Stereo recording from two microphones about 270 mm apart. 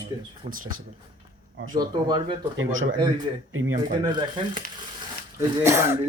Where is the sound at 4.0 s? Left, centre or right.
Centre.